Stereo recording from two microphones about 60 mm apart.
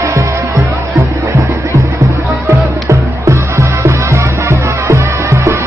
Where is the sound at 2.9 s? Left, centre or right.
Right.